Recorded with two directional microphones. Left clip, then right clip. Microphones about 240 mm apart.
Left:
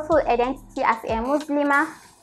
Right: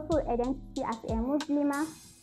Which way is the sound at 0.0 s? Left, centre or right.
Centre.